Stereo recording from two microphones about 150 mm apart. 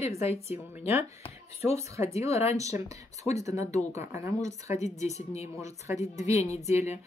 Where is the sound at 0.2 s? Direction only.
45° left (ahead or behind).